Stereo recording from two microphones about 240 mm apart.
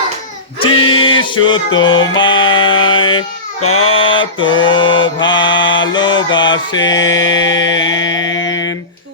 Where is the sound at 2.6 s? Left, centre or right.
Left.